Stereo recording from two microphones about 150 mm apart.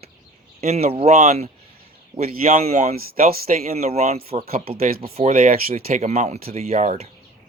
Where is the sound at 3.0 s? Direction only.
90° right.